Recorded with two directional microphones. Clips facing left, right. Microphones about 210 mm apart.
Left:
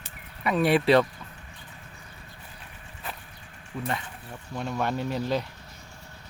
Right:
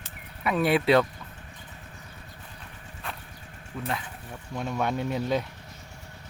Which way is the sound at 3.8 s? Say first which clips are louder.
Even; centre (ahead or behind).